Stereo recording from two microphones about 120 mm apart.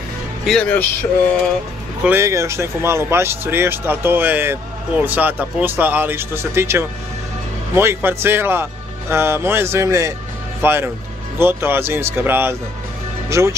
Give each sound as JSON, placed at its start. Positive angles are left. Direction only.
{"t": 0.5, "sound": "speech", "side_deg": 5}
{"t": 2.0, "sound": "speech", "side_deg": -25}